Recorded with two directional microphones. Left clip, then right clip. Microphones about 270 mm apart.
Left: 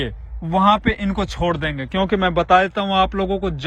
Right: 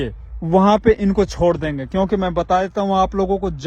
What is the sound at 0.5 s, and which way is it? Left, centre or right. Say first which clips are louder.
Speech: right 2 dB; right.